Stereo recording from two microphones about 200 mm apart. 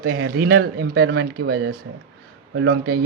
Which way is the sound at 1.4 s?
90° right.